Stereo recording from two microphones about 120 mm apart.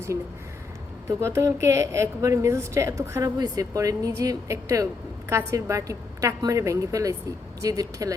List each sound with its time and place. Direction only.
1.0 s a woman's voice: 25° right (ahead or behind)